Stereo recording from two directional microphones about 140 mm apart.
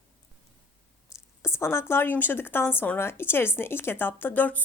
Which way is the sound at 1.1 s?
20° left (ahead or behind).